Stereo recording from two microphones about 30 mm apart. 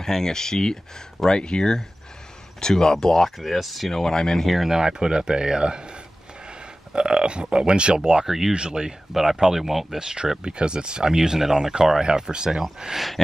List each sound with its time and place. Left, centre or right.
0.0 s speech: centre
3.3 s speech: centre
3.9 s speech: centre
4.6 s speech: right
8.3 s speech: centre
8.5 s speech: right
9.1 s speech: centre
9.9 s speech: right
11.1 s speech: centre
12.1 s speech: right